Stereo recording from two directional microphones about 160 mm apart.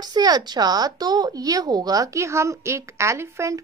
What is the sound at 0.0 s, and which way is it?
Speech, 25° right (ahead or behind).